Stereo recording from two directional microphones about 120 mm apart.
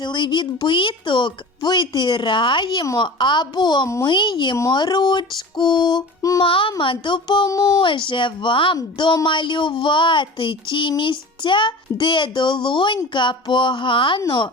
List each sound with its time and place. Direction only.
0.0 s speech: 40° left (ahead or behind)
6.4 s speech: 45° left (ahead or behind); by 7.8 s 30° left (ahead or behind)
7.8 s a sound: 45° left (ahead or behind)
13.1 s speech: 40° left (ahead or behind)